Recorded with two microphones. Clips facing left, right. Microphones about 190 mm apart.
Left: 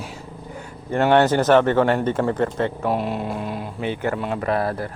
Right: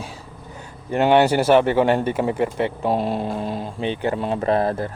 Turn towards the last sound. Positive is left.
turn(degrees=-25)  # may be behind; listen again after turning